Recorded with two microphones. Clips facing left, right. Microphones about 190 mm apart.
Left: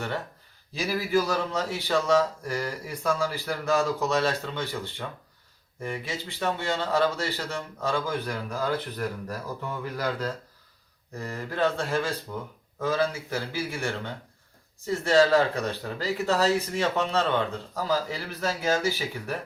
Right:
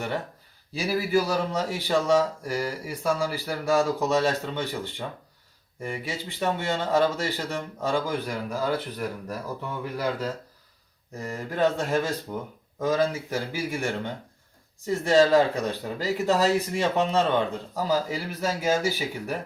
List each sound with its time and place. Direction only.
0.9 s speech: 10° right (ahead or behind)